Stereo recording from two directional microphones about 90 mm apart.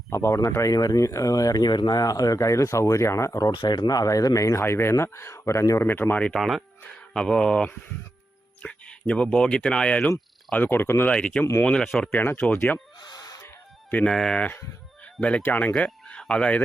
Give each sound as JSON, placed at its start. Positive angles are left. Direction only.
{"t": 0.1, "sound": "speech", "side_deg": 30}
{"t": 3.5, "sound": "speech", "side_deg": 55}
{"t": 5.9, "sound": "speech", "side_deg": 25}
{"t": 6.9, "sound": "speech", "side_deg": 5}
{"t": 11.1, "sound": "speech", "side_deg": 10}
{"t": 12.1, "sound": "speech", "side_deg": 25}
{"t": 13.0, "sound": "a sound", "side_deg": 50}
{"t": 14.1, "sound": "speech", "side_deg": 5}
{"t": 15.0, "sound": "fowl", "side_deg": 15}
{"t": 15.4, "sound": "speech", "side_deg": 20}